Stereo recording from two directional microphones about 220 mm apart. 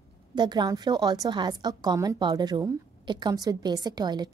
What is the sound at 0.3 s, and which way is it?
A woman's voice, 20° right (ahead or behind).